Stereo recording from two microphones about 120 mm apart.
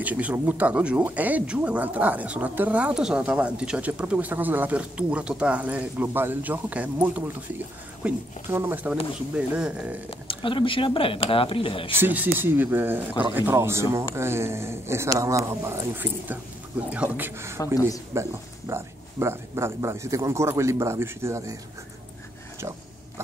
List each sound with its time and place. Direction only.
0.0 s speech: 10° right (ahead or behind)
10.0 s speech: 45° left (ahead or behind)
11.9 s speech: 15° right (ahead or behind)
22.6 s a sound: 25° right (ahead or behind)